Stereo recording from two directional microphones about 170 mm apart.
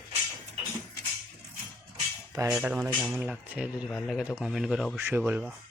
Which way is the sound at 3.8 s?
5° left (ahead or behind).